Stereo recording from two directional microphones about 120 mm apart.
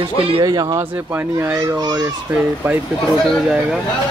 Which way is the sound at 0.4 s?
30° right (ahead or behind).